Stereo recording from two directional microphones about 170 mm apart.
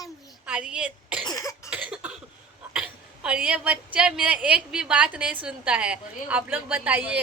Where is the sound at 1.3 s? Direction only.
20° left (ahead or behind).